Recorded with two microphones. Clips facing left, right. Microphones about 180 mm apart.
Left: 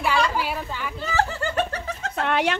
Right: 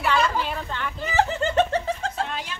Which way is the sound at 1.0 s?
20° right (ahead or behind).